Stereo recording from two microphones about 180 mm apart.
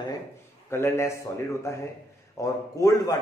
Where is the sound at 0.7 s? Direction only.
15° left (ahead or behind).